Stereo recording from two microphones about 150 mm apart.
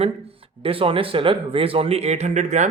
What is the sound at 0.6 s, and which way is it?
A man's voice, 35° right (ahead or behind).